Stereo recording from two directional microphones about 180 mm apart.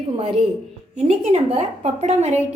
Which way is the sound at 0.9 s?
35° right (ahead or behind).